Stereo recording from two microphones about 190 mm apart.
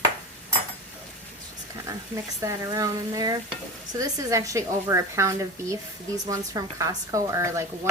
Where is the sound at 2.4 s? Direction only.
15° right (ahead or behind).